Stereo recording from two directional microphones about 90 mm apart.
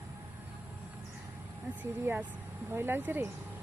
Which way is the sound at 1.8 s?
20° right (ahead or behind).